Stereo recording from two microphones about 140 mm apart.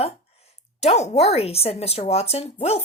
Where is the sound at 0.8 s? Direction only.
50° left (ahead or behind).